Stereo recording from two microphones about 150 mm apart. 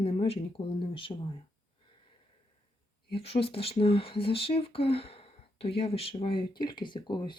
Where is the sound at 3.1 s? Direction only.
40° left (ahead or behind).